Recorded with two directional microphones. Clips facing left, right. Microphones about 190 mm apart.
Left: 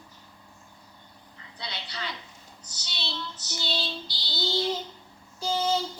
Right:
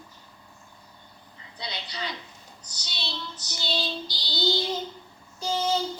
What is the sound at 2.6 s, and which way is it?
Child singing, 15° right (ahead or behind).